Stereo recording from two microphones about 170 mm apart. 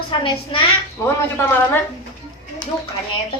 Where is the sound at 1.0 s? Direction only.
15° left (ahead or behind).